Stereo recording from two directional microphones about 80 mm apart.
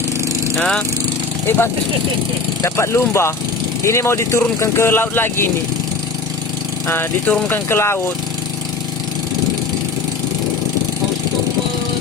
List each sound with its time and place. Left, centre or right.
0.5 s speech: centre
2.6 s speech: left
6.8 s speech: left